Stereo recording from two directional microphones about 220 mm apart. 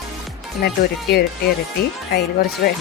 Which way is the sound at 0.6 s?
45° left (ahead or behind).